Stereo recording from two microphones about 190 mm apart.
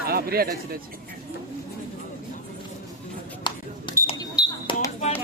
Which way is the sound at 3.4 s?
25° left (ahead or behind).